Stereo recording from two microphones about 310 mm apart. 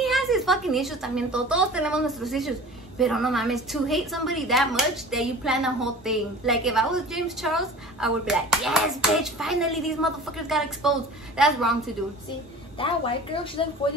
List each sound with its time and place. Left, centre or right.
0.0 s speech: centre
12.7 s a woman's voice: centre